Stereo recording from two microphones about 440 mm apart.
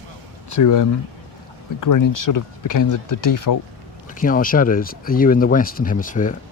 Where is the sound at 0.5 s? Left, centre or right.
Left.